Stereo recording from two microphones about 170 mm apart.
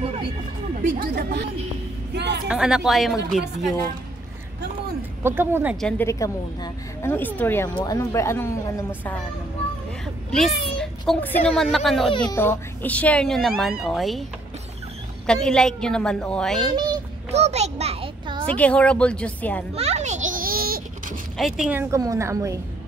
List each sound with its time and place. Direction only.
0.8 s a woman's voice: 60° right (ahead or behind); by 2.4 s 85° right
2.4 s a woman's voice: 5° right (ahead or behind)
5.2 s a woman's voice: 15° right (ahead or behind)
5.8 s a woman's voice: 5° left (ahead or behind)
6.0 s speech: 20° left (ahead or behind)
10.3 s speech: centre (ahead or behind)
12.1 s speech: 25° left (ahead or behind)
12.4 s a woman's voice: 10° left (ahead or behind)
15.2 s a woman's voice: 5° left (ahead or behind)
17.3 s a sound: 40° right (ahead or behind)
18.5 s speech: 5° left (ahead or behind)
19.7 s a sound: 40° right (ahead or behind); by 20.8 s 60° right (ahead or behind)
21.4 s a woman's voice: centre (ahead or behind); by 22.6 s 20° right (ahead or behind)